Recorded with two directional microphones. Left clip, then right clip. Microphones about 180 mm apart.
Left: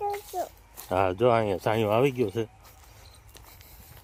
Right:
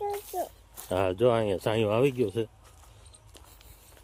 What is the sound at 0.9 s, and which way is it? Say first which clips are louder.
Speech: left 2 dB; 10° left (ahead or behind).